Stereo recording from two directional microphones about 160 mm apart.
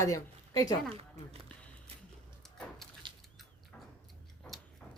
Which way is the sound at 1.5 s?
5° left (ahead or behind).